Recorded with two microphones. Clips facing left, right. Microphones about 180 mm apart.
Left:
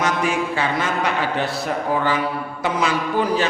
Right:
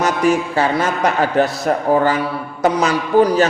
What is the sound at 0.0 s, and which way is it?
A man's voice, 40° right (ahead or behind).